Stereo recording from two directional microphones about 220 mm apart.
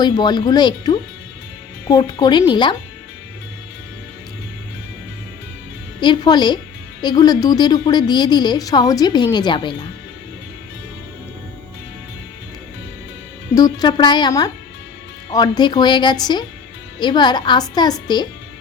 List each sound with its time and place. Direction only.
0.0 s a woman's voice: 20° left (ahead or behind)
6.0 s a woman's voice: 20° left (ahead or behind)
13.6 s a woman's voice: 15° left (ahead or behind)